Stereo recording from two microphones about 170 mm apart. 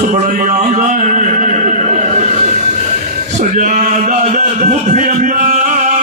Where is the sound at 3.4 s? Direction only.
45° right (ahead or behind).